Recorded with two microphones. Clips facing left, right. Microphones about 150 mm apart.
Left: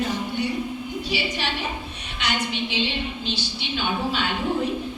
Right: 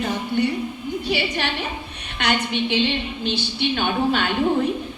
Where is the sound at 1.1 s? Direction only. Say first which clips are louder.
Right 4 dB; 55° right (ahead or behind).